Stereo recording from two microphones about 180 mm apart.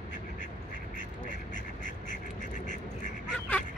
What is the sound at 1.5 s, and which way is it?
Duck, 45° left (ahead or behind).